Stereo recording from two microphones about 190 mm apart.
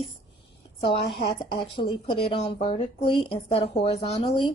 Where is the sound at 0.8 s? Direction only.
25° left (ahead or behind).